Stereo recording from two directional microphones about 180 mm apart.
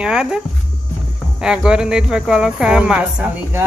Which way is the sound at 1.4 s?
5° right (ahead or behind).